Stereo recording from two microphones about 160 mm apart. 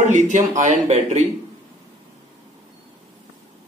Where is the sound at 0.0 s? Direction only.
50° right (ahead or behind).